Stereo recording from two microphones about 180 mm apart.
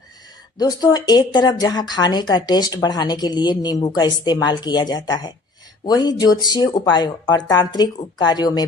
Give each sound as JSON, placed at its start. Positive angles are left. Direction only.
{"t": 0.6, "sound": "speech", "side_deg": 20}